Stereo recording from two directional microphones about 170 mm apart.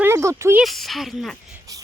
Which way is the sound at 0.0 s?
15° right (ahead or behind).